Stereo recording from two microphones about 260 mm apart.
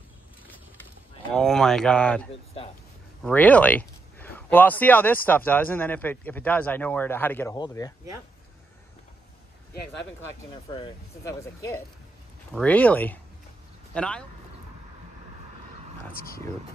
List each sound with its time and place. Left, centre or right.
1.3 s speech: centre
10.5 s speech: centre
16.1 s speech: left